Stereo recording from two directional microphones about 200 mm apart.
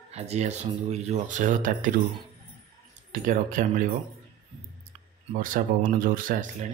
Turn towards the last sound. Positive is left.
turn(degrees=-40)  # may be behind; listen again after turning